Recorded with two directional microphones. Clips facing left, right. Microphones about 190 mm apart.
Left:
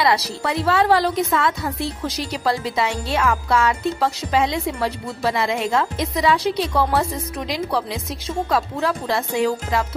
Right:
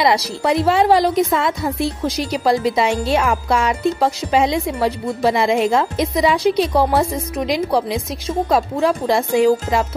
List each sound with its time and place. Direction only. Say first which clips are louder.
0.0 s a woman's voice: right 3 dB; 15° right (ahead or behind)